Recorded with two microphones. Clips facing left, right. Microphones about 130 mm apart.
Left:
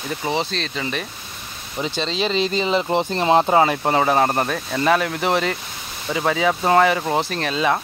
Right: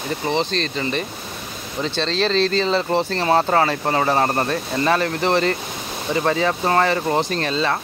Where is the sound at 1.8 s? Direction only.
10° left (ahead or behind).